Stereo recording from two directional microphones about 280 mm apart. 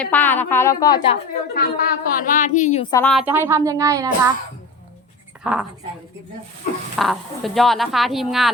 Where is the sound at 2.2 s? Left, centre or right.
Left.